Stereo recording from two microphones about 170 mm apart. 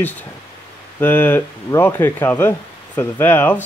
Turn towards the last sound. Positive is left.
turn(degrees=10)  # may be behind; listen again after turning